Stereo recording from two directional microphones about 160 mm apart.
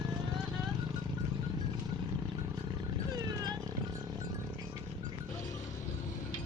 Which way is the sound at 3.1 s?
25° right (ahead or behind).